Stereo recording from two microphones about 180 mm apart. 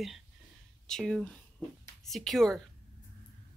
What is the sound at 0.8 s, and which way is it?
Speech, centre (ahead or behind).